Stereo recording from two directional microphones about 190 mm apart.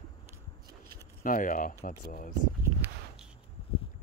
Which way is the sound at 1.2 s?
45° left (ahead or behind).